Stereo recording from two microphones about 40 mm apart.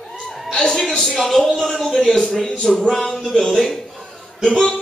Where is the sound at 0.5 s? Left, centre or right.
Centre.